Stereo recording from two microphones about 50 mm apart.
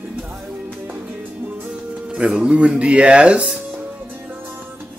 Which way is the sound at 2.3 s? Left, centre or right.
Right.